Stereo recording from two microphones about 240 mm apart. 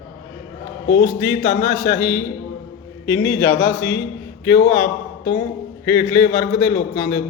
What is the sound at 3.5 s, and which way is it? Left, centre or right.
A man's voice, left.